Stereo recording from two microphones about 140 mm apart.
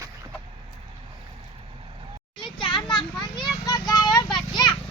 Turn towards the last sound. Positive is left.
turn(degrees=0)  # may be behind; listen again after turning